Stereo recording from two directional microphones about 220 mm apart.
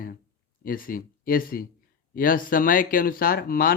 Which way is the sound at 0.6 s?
40° left (ahead or behind).